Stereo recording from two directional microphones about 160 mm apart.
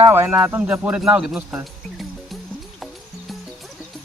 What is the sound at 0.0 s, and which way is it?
Speech, 15° right (ahead or behind).